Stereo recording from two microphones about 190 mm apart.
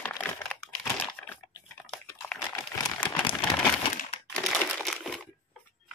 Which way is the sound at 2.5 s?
20° left (ahead or behind).